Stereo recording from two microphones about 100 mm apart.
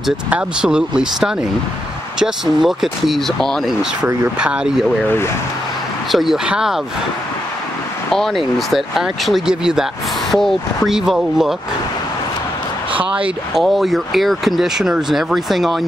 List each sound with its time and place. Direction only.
0.3 s speech: 10° right (ahead or behind)
4.4 s speech: 10° right (ahead or behind)
5.0 s speech: 25° left (ahead or behind)
6.1 s speech: 5° right (ahead or behind)
8.1 s speech: 5° left (ahead or behind)
13.0 s speech: 15° right (ahead or behind)
13.6 s speech: centre (ahead or behind)